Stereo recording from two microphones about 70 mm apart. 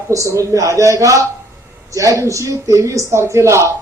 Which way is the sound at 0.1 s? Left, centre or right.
Right.